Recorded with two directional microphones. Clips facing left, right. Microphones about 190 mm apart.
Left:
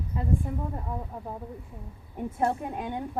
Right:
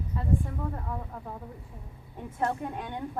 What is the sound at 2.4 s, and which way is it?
Speech, 10° left (ahead or behind).